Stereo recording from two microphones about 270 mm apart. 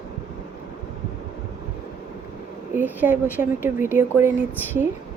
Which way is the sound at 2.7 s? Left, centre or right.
Centre.